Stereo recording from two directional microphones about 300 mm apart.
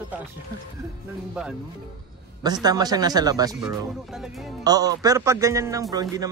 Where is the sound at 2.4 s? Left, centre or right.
Centre.